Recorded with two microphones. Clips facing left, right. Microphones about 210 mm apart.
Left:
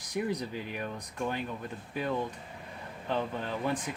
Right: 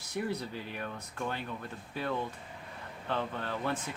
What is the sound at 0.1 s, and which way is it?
Speech, 15° left (ahead or behind).